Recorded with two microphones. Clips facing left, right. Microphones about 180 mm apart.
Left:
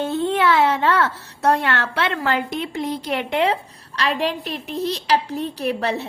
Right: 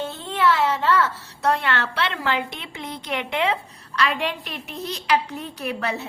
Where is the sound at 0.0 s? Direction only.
60° left (ahead or behind).